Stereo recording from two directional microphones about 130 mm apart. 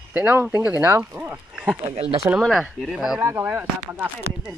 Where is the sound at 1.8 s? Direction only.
50° right (ahead or behind).